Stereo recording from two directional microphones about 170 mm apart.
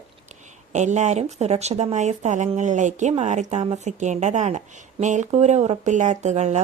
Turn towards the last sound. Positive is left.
turn(degrees=-45)  # may be behind; listen again after turning